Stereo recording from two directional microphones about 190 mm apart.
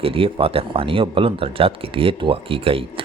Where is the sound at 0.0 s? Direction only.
30° right (ahead or behind).